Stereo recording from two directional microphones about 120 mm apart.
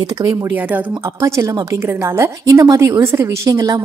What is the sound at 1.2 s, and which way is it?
A woman's voice, 25° right (ahead or behind).